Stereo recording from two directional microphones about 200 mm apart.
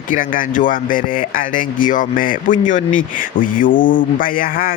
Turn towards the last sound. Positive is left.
turn(degrees=45)  # may be behind; listen again after turning